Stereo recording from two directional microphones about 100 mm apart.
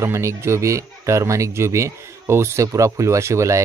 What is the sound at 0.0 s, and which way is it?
Speech, 30° right (ahead or behind).